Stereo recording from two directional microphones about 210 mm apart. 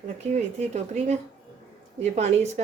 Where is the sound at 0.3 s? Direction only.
30° right (ahead or behind).